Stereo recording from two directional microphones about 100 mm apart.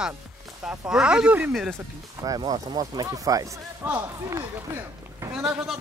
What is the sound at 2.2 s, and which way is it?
Speech, 40° right (ahead or behind).